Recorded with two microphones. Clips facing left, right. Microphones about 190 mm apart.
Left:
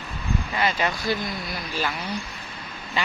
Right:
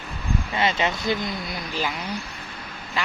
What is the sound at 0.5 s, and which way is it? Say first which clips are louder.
Speech: right 2 dB; 25° right (ahead or behind).